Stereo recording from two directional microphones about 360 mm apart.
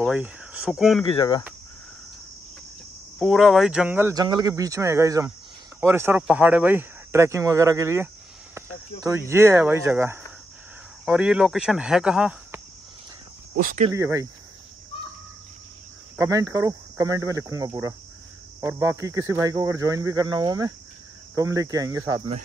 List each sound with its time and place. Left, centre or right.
0.0 s speech: centre
1.0 s speech: centre
3.2 s speech: centre
9.3 s speech: centre
13.7 s speech: centre
13.9 s speech: centre
16.2 s speech: centre